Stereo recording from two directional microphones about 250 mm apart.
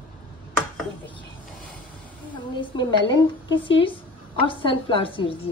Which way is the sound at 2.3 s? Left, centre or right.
Centre.